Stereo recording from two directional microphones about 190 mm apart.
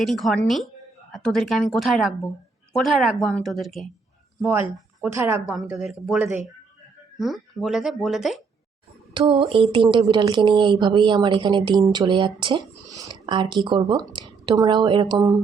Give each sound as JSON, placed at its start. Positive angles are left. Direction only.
{"t": 0.0, "sound": "speech", "side_deg": 0}
{"t": 5.7, "sound": "speech", "side_deg": 0}
{"t": 9.1, "sound": "a woman's voice", "side_deg": -25}